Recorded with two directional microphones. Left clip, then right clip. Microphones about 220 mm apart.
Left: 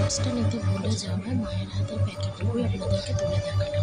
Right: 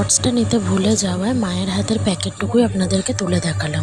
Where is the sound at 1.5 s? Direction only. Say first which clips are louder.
Right 12 dB; 40° right (ahead or behind).